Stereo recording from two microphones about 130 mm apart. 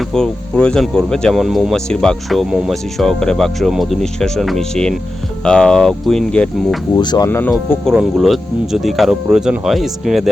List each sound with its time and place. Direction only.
0.0 s speech: 5° left (ahead or behind)
6.9 s speech: 30° left (ahead or behind)
7.3 s speech: 15° left (ahead or behind)
7.9 s speech: centre (ahead or behind)